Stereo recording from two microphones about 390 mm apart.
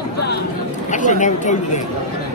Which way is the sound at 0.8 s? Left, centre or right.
Centre.